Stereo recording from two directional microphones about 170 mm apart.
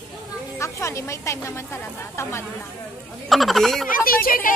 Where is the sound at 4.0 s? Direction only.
60° left (ahead or behind).